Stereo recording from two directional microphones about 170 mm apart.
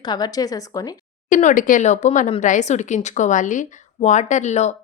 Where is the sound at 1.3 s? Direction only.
45° left (ahead or behind).